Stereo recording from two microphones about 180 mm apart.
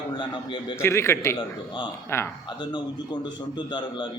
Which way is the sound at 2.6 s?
25° left (ahead or behind).